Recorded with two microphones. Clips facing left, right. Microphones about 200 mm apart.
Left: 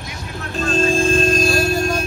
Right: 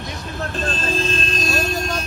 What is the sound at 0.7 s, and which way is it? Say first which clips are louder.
Speech: left 10 dB; 45° left (ahead or behind).